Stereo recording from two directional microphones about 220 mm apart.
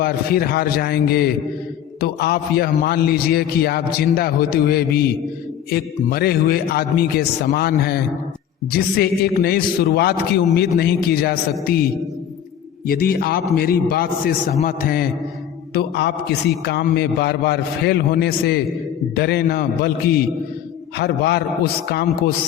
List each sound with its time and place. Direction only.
0.0 s a man's voice: 45° left (ahead or behind)
12.9 s a man's voice: 40° left (ahead or behind)
21.0 s a man's voice: 50° left (ahead or behind)